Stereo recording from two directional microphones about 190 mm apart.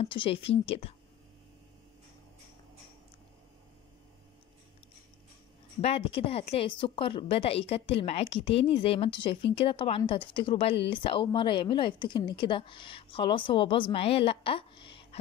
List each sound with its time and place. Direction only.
0.0 s speech: 30° left (ahead or behind)
5.8 s speech: 30° left (ahead or behind)